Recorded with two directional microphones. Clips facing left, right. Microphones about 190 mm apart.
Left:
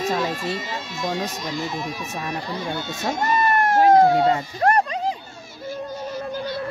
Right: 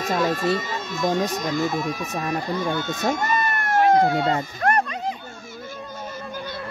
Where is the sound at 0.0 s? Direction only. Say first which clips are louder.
Right 2 dB; 45° right (ahead or behind).